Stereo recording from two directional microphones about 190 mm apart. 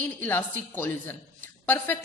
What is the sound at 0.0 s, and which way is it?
A woman's voice, 10° left (ahead or behind).